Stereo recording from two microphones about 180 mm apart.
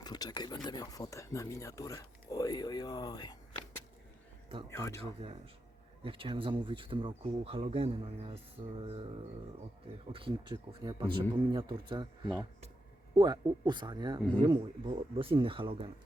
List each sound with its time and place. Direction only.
0.0 s speech: 20° left (ahead or behind)
4.7 s speech: 15° left (ahead or behind)
5.2 s speech: 30° right (ahead or behind)